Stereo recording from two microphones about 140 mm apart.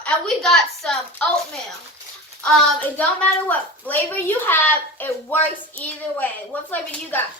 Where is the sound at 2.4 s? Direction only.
5° left (ahead or behind).